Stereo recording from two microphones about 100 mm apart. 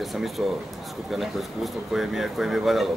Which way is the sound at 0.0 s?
Centre (ahead or behind).